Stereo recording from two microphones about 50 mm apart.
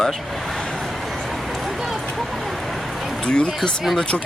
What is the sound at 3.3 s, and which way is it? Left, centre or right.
Speech, centre.